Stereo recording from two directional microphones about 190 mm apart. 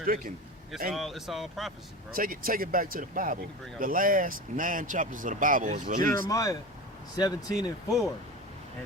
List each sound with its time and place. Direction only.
0.0 s speech: 50° right (ahead or behind)
0.9 s speech: centre (ahead or behind)
2.1 s speech: 50° right (ahead or behind)
6.2 s speech: 20° left (ahead or behind)